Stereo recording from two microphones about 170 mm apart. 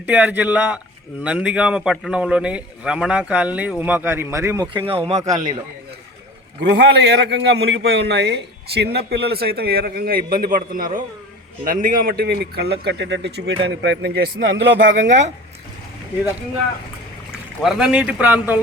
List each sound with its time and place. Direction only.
0.0 s a man's voice: 10° right (ahead or behind)
6.6 s a man's voice: 85° right
17.6 s speech: 5° right (ahead or behind)